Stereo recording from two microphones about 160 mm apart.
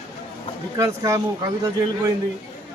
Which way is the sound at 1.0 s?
20° right (ahead or behind).